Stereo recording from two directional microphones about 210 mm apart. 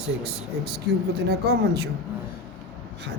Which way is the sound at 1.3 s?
50° right (ahead or behind).